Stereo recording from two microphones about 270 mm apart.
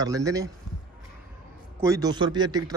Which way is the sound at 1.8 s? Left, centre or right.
Centre.